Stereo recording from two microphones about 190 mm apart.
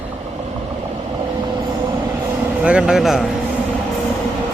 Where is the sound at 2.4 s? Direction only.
5° right (ahead or behind).